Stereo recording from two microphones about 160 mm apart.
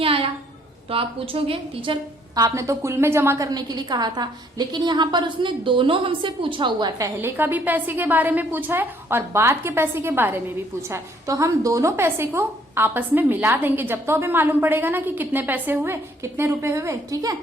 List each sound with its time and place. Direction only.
0.0 s a sound: 35° right (ahead or behind)
0.9 s a woman's voice: 35° right (ahead or behind)
2.3 s a woman's voice: 20° right (ahead or behind)
7.2 s a woman's voice: 15° right (ahead or behind)